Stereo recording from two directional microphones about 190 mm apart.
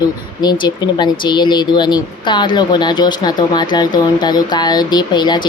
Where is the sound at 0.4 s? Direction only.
20° left (ahead or behind).